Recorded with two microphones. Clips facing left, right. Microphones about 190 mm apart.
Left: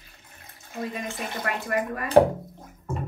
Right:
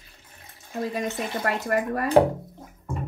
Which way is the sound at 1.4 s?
40° right (ahead or behind).